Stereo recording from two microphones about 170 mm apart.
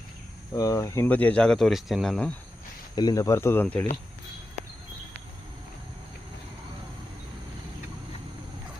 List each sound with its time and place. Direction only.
0.5 s speech: 20° left (ahead or behind); by 2.3 s 5° left (ahead or behind)
2.9 s speech: 25° left (ahead or behind)